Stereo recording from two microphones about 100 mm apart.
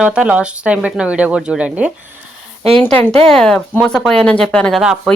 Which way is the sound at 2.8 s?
20° left (ahead or behind).